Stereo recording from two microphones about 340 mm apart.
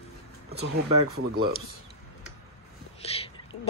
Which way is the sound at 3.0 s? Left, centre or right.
Centre.